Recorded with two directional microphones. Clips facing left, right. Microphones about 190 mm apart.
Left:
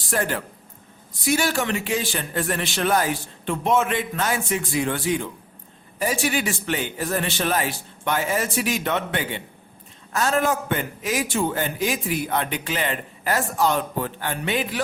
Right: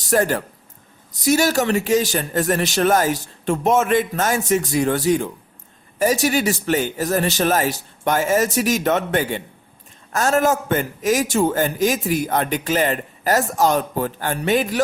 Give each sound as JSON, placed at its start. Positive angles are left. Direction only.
{"t": 0.0, "sound": "a man's voice", "side_deg": -40}